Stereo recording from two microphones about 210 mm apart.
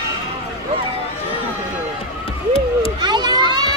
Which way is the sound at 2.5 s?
20° right (ahead or behind).